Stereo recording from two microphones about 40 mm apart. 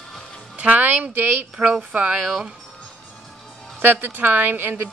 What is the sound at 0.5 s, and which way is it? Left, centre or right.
Music, right.